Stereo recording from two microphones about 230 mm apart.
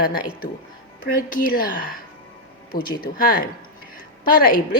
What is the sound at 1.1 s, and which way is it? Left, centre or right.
Speech, left.